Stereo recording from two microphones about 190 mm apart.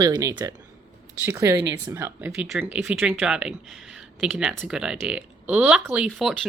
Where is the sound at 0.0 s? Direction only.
20° right (ahead or behind).